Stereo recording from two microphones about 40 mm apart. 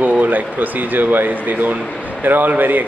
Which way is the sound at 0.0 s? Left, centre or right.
Right.